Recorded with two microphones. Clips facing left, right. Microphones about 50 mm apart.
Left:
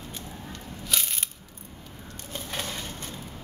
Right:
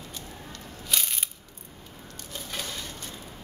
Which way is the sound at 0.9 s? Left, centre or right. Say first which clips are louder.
Even; centre.